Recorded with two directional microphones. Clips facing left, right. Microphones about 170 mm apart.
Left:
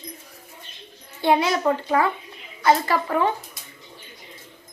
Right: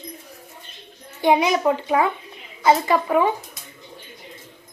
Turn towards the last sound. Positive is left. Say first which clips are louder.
# right 3 dB
turn(degrees=-15)  # may be behind; listen again after turning